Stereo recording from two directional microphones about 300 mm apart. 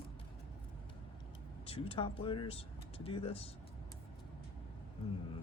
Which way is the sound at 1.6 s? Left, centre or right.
Centre.